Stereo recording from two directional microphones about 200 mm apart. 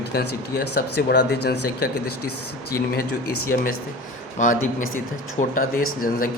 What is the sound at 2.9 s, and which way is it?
Speech, 50° left (ahead or behind).